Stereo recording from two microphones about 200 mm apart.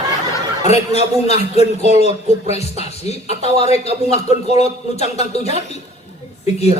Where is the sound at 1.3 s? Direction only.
30° left (ahead or behind).